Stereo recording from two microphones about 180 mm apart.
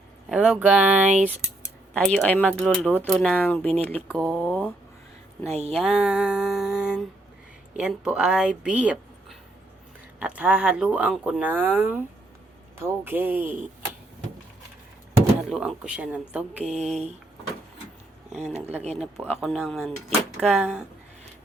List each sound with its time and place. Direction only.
0.3 s speech: 5° right (ahead or behind)
5.5 s speech: 35° right (ahead or behind)
5.7 s speech: 5° right (ahead or behind)
10.2 s speech: 5° right (ahead or behind)
15.4 s speech: centre (ahead or behind)
18.3 s speech: 40° right (ahead or behind)
18.9 s speech: centre (ahead or behind)